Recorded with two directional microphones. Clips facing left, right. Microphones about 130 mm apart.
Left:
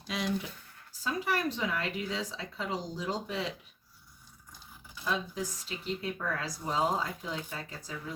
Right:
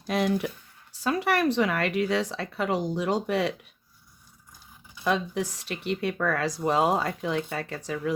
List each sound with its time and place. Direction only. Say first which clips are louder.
0.1 s speech: right 8 dB; 60° right (ahead or behind)
0.9 s speech: right 7 dB; 70° right (ahead or behind)
5.0 s speech: right 7 dB; 70° right (ahead or behind)